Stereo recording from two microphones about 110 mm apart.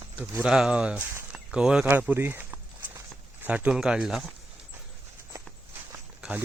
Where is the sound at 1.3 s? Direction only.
10° right (ahead or behind).